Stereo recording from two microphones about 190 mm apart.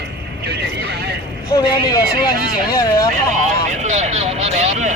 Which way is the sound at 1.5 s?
25° left (ahead or behind).